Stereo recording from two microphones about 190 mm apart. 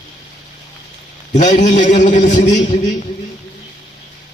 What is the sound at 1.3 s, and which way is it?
A man's voice, 40° left (ahead or behind).